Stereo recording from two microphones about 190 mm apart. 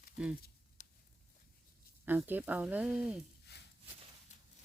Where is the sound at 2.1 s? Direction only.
10° right (ahead or behind).